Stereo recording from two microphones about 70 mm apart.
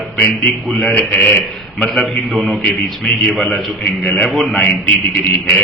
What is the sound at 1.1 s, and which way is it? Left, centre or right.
Speech, left.